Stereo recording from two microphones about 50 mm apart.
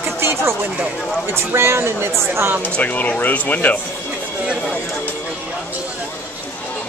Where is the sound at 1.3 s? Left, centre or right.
Right.